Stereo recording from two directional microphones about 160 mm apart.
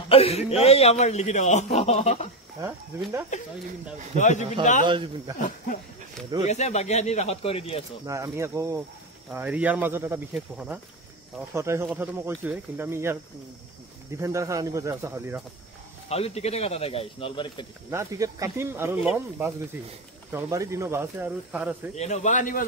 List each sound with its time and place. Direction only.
0.1 s a man's voice: 40° left (ahead or behind)
3.3 s a man's voice: 50° left (ahead or behind)
4.8 s speech: 30° right (ahead or behind)
6.4 s a man's voice: 45° left (ahead or behind)
8.1 s speech: 20° right (ahead or behind)
11.5 s speech: 15° right (ahead or behind)
14.2 s speech: 20° right (ahead or behind)
16.1 s speech: 40° left (ahead or behind)
17.9 s speech: 20° right (ahead or behind)
21.9 s a man's voice: 45° left (ahead or behind)